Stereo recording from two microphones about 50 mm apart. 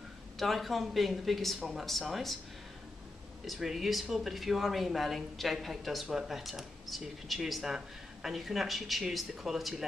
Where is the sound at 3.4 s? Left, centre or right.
Centre.